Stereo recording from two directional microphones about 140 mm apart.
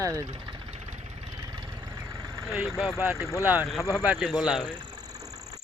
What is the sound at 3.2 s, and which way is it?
Speech, 15° right (ahead or behind).